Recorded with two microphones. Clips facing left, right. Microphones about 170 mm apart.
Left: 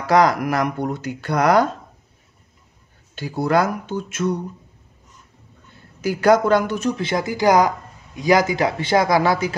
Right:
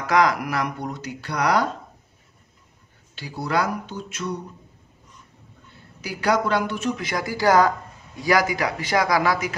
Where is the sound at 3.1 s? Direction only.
50° left (ahead or behind).